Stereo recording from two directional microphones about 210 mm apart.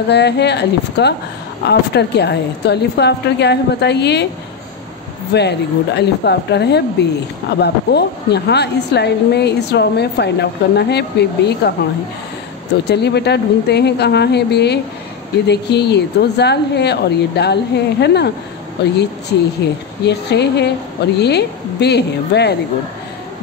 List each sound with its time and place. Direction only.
0.1 s a woman's voice: 55° left (ahead or behind)
5.3 s a woman's voice: 55° left (ahead or behind)
12.8 s a woman's voice: 55° left (ahead or behind)